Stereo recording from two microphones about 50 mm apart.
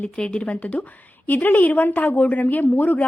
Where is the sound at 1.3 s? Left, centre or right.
Left.